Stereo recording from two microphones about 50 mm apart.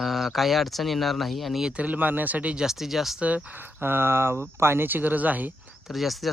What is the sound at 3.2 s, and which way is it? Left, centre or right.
Speech, right.